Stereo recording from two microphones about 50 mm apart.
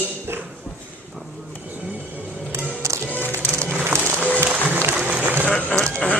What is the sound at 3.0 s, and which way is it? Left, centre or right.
Music, left.